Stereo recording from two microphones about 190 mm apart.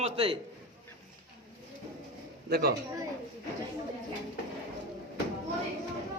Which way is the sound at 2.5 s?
55° right (ahead or behind).